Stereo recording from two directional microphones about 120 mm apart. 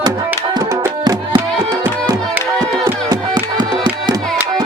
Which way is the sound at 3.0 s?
35° right (ahead or behind).